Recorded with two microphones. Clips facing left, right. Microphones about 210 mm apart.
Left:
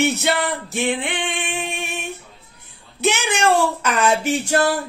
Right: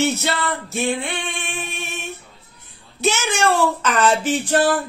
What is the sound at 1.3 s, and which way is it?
Female singing, 15° left (ahead or behind).